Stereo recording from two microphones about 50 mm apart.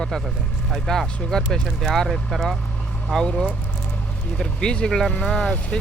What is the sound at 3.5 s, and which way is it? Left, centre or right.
Speech, left.